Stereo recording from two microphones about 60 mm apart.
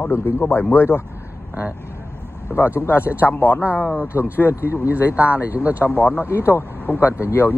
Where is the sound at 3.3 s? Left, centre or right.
Left.